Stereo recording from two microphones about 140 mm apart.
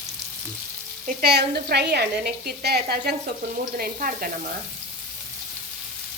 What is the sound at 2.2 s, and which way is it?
Frying, 90° right.